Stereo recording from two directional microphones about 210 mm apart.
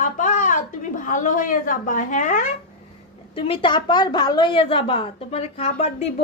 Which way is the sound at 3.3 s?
25° left (ahead or behind).